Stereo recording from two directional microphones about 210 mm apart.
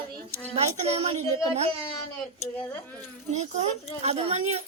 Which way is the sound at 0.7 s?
35° right (ahead or behind).